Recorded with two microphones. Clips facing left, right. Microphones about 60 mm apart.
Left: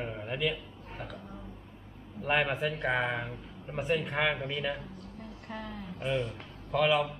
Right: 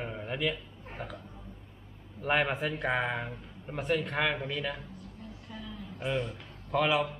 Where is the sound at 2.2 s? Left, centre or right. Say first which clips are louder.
Even; centre.